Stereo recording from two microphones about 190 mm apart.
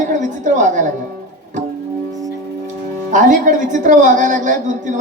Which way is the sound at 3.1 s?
40° right (ahead or behind).